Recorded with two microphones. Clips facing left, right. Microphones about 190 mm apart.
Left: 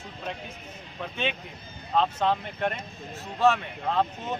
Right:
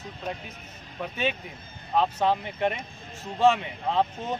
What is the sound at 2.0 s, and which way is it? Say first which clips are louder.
A man's voice: right 1 dB; 10° right (ahead or behind).